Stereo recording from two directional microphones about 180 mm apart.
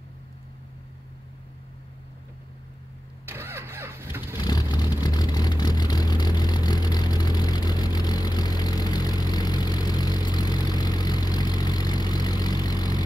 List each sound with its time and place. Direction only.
3.3 s vehicle: 15° right (ahead or behind)
4.4 s vehicle: 25° left (ahead or behind)